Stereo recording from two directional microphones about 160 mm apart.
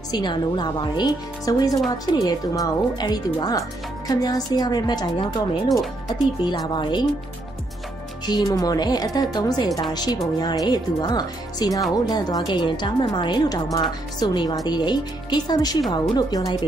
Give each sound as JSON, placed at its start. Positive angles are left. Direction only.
{"t": 0.1, "sound": "a woman's voice", "side_deg": 30}
{"t": 5.7, "sound": "speech", "side_deg": 0}
{"t": 6.4, "sound": "a woman's voice", "side_deg": 25}
{"t": 8.3, "sound": "a woman's voice", "side_deg": 25}